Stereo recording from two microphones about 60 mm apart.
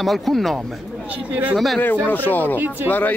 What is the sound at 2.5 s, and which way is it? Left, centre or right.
Speech, right.